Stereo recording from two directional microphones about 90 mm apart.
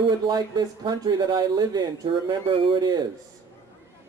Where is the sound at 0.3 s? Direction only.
50° right (ahead or behind).